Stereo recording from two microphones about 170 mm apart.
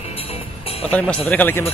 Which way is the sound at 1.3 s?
10° left (ahead or behind).